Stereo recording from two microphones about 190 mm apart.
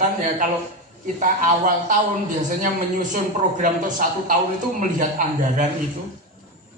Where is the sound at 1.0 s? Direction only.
45° right (ahead or behind).